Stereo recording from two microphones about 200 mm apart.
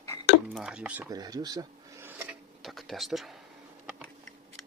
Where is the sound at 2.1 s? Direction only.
5° right (ahead or behind).